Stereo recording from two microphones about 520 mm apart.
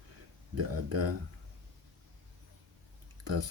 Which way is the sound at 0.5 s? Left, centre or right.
Right.